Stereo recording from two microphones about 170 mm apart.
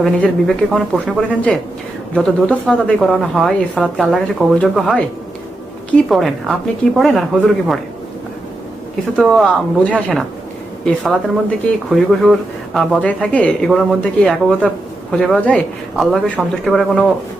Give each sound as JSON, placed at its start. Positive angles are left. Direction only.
{"t": 0.0, "sound": "a woman's voice", "side_deg": 0}
{"t": 9.1, "sound": "a woman's voice", "side_deg": 0}